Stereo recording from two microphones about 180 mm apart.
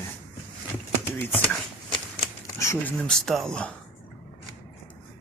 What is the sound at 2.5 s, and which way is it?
Speech, 15° left (ahead or behind).